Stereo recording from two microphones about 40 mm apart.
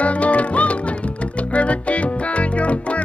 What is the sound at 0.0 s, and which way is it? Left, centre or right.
Music, left.